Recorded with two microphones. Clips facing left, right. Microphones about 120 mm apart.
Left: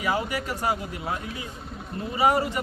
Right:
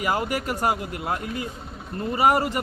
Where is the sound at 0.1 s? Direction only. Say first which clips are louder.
Right 1 dB; 50° right (ahead or behind).